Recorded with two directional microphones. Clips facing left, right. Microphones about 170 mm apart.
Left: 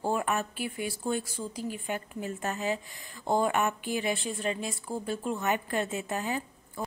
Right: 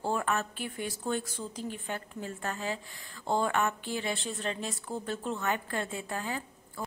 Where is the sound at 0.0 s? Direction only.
15° left (ahead or behind).